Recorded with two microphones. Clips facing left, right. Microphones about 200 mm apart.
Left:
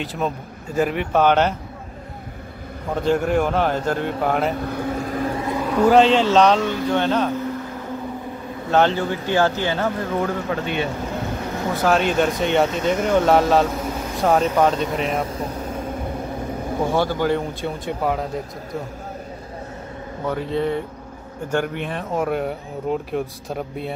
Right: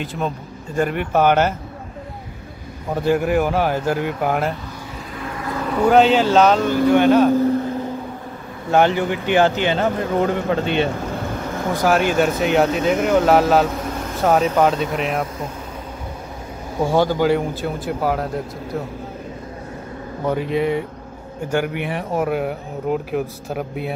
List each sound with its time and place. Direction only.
0.0 s speech: centre (ahead or behind)
2.9 s speech: 10° right (ahead or behind)
4.6 s vehicle: 55° left (ahead or behind)
5.3 s vehicle: 25° left (ahead or behind)
5.7 s speech: centre (ahead or behind)
8.7 s speech: 15° right (ahead or behind)
11.7 s speech: 10° right (ahead or behind)
16.9 s speech: 15° right (ahead or behind)
17.6 s speech: centre (ahead or behind)
20.2 s speech: 15° right (ahead or behind)